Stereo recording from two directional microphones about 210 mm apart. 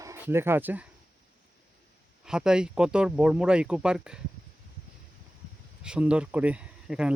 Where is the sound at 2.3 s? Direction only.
5° right (ahead or behind).